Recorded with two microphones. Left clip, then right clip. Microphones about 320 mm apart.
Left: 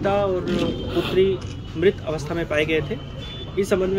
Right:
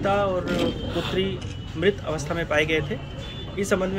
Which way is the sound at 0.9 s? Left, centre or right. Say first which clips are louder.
Left 4 dB; left.